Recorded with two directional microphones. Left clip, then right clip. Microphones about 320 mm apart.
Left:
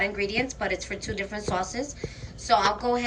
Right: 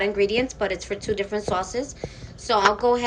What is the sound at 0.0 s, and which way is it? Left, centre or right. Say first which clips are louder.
A woman's voice: right 5 dB; centre.